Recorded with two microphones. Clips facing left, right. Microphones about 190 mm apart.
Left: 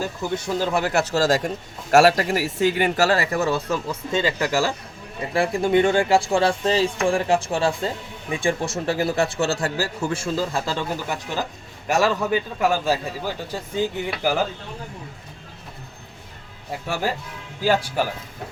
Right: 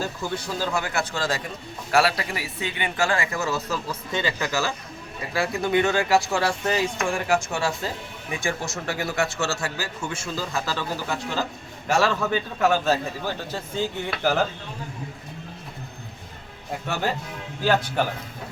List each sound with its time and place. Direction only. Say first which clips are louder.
0.0 s speech: left 3 dB; 20° left (ahead or behind)
11.1 s a man's voice: even; 15° left (ahead or behind)
16.8 s a man's voice: left 1 dB; 10° left (ahead or behind)